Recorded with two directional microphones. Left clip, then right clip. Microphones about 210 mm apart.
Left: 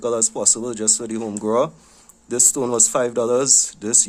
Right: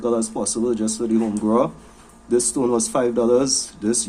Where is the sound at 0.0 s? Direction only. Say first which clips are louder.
Left 1 dB; 55° left (ahead or behind).